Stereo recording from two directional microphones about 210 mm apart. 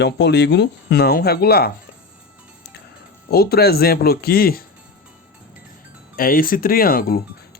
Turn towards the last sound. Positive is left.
turn(degrees=45)  # may be behind; listen again after turning